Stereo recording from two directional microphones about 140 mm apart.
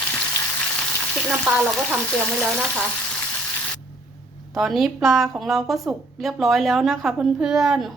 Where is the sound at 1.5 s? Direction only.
10° right (ahead or behind).